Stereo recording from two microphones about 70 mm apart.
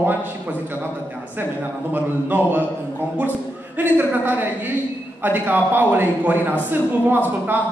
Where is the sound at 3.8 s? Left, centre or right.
Right.